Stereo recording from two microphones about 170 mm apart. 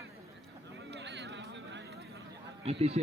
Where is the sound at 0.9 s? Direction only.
90° right.